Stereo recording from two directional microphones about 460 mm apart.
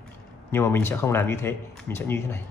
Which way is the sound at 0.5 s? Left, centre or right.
Centre.